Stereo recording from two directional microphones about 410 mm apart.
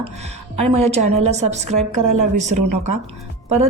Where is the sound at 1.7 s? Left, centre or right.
Right.